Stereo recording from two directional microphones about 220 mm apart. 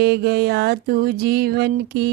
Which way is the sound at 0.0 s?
45° right (ahead or behind).